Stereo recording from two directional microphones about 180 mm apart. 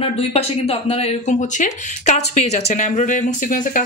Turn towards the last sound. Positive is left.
turn(degrees=45)  # may be behind; listen again after turning